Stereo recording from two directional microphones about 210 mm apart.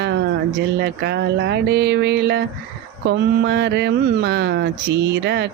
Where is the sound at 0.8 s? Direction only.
55° right (ahead or behind).